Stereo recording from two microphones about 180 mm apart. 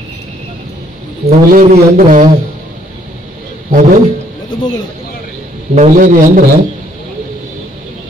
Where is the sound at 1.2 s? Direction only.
40° right (ahead or behind).